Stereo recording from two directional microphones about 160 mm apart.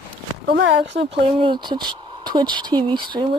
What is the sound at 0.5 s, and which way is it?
Speech, 90° right.